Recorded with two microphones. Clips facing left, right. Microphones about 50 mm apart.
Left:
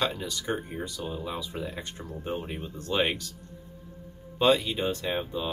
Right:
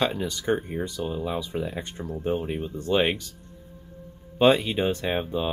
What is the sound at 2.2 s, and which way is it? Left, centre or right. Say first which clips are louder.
Speech: right 7 dB; centre.